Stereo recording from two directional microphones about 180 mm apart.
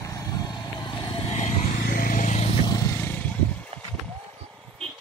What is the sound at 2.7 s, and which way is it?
Vehicle, 15° left (ahead or behind).